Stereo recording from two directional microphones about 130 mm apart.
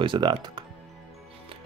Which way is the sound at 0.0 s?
35° right (ahead or behind).